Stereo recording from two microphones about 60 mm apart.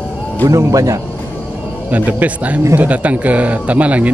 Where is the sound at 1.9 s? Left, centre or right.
Right.